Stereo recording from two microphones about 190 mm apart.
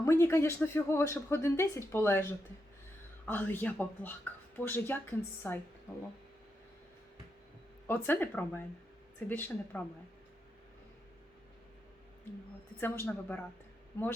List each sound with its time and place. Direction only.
0.0 s speech: 15° left (ahead or behind)
3.2 s speech: 10° left (ahead or behind)
7.9 s speech: 10° left (ahead or behind)
12.8 s speech: 10° left (ahead or behind)